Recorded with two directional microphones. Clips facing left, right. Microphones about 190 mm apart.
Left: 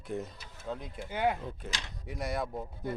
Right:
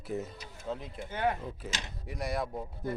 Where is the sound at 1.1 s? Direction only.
10° left (ahead or behind).